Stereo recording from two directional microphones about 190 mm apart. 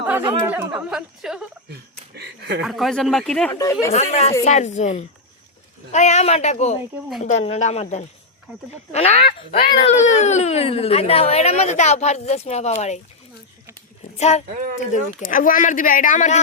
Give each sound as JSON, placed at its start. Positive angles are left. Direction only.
{"t": 0.0, "sound": "chatter", "side_deg": -10}
{"t": 0.4, "sound": "a woman's voice", "side_deg": -10}
{"t": 1.7, "sound": "a sound", "side_deg": -60}
{"t": 2.6, "sound": "a woman's voice", "side_deg": 0}
{"t": 3.5, "sound": "speech", "side_deg": 15}
{"t": 3.9, "sound": "speech", "side_deg": 35}
{"t": 9.8, "sound": "speech", "side_deg": 40}
{"t": 14.2, "sound": "speech", "side_deg": 35}
{"t": 14.5, "sound": "speech", "side_deg": -45}
{"t": 14.9, "sound": "speech", "side_deg": 45}